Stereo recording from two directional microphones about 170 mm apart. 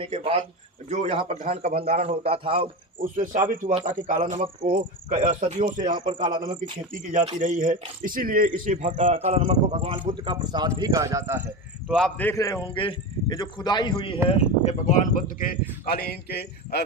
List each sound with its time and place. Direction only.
0.0 s a man's voice: 35° right (ahead or behind)
2.6 s a man's voice: 55° right (ahead or behind)
5.8 s a man's voice: 30° right (ahead or behind)
6.9 s a man's voice: 45° right (ahead or behind)
9.1 s a man's voice: 40° right (ahead or behind)
10.1 s a man's voice: 25° right (ahead or behind)
11.9 s a man's voice: centre (ahead or behind)
12.6 s a man's voice: 30° left (ahead or behind)
14.3 s speech: 40° left (ahead or behind)
15.9 s a man's voice: 70° left (ahead or behind)